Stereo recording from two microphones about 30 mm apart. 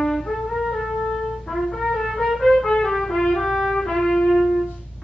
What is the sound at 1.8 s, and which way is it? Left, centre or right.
Music, centre.